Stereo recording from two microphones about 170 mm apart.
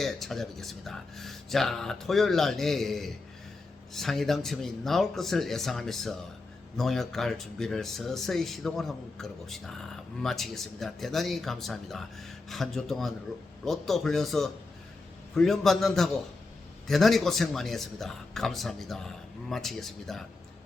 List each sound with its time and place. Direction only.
0.0 s speech: centre (ahead or behind)